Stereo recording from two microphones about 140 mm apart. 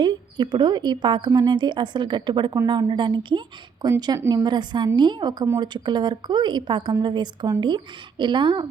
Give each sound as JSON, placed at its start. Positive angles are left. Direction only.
{"t": 0.0, "sound": "a woman's voice", "side_deg": -30}
{"t": 4.2, "sound": "a woman's voice", "side_deg": -20}
{"t": 4.4, "sound": "a woman's voice", "side_deg": -35}